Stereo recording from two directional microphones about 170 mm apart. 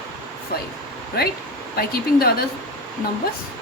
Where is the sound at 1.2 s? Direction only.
65° left (ahead or behind).